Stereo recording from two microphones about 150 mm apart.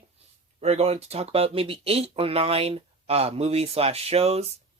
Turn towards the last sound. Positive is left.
turn(degrees=-45)  # may be behind; listen again after turning